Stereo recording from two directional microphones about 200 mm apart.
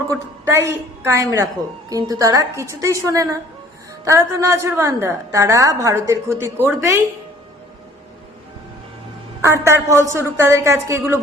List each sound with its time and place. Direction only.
0.1 s a woman's voice: 15° right (ahead or behind)
9.4 s a woman's voice: 15° right (ahead or behind)